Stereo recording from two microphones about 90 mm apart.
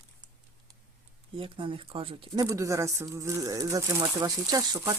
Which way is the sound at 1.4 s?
80° right.